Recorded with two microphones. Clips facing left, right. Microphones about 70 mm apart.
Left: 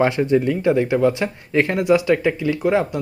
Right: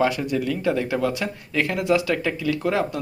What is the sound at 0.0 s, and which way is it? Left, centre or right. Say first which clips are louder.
Speech: left 5 dB; left.